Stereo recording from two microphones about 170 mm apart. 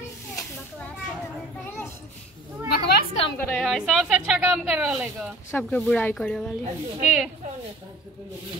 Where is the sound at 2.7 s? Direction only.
65° left (ahead or behind).